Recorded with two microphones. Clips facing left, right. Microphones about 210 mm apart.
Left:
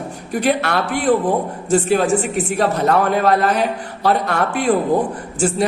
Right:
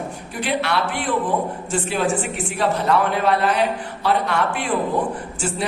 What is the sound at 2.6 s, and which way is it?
A man's voice, 45° left (ahead or behind).